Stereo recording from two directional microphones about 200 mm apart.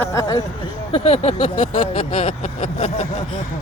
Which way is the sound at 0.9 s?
30° left (ahead or behind).